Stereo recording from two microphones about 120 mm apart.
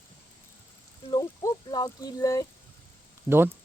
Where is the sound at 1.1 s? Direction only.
35° left (ahead or behind).